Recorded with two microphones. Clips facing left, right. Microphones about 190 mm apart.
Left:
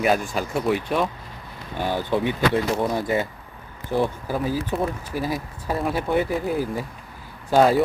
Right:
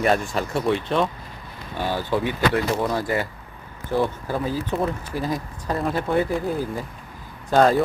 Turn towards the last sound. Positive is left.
turn(degrees=10)  # may be behind; listen again after turning